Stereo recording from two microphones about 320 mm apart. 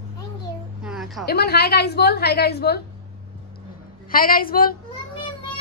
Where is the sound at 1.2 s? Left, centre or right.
Left.